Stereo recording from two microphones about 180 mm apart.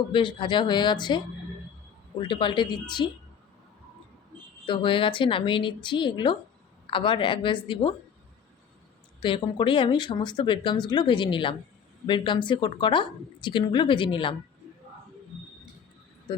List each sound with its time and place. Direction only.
0.1 s speech: 25° left (ahead or behind)
4.6 s speech: 30° left (ahead or behind)
9.2 s speech: 30° left (ahead or behind)